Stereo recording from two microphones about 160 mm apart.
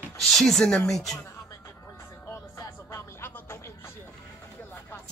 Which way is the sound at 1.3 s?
15° left (ahead or behind).